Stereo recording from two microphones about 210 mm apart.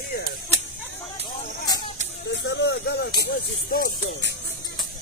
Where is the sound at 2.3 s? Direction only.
60° left (ahead or behind).